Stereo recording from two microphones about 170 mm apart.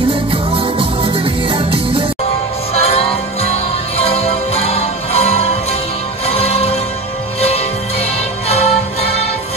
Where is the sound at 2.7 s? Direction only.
35° left (ahead or behind).